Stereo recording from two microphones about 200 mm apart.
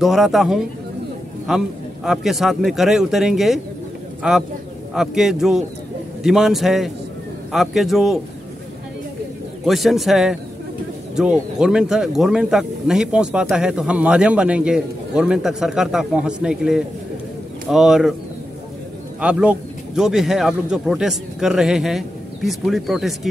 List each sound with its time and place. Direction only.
0.0 s speech: centre (ahead or behind)
9.7 s speech: centre (ahead or behind)
19.2 s speech: 5° right (ahead or behind)